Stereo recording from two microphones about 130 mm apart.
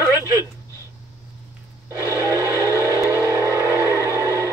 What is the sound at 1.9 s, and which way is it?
Vehicle, 20° right (ahead or behind).